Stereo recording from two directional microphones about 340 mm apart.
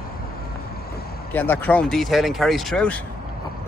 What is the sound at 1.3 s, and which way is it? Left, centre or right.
Speech, centre.